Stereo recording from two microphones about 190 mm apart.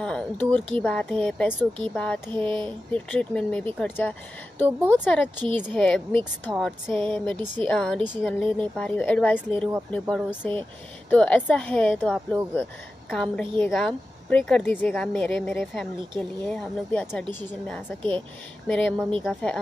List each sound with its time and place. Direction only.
0.0 s a woman's voice: 5° left (ahead or behind)